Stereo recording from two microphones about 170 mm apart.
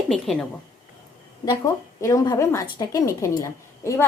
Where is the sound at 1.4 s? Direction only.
20° left (ahead or behind).